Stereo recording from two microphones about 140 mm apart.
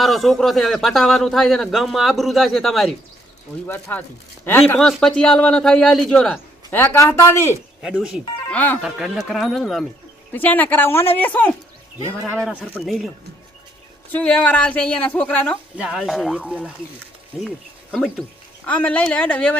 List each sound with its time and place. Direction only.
0.0 s a man's voice: centre (ahead or behind)
3.7 s a woman's voice: 15° left (ahead or behind)
4.8 s a man's voice: 5° left (ahead or behind)
6.7 s speech: 15° left (ahead or behind)
7.8 s speech: 5° right (ahead or behind)
8.4 s speech: 10° left (ahead or behind)
8.8 s a man's voice: centre (ahead or behind)
10.3 s a woman's voice: 15° left (ahead or behind)
14.1 s a woman's voice: 10° left (ahead or behind)
15.8 s a man's voice: 5° right (ahead or behind)
17.9 s a woman's voice: 5° left (ahead or behind)